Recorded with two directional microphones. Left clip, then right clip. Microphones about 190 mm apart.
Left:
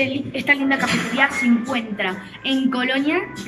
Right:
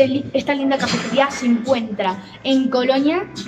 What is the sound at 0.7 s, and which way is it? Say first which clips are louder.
Speech: even; centre (ahead or behind).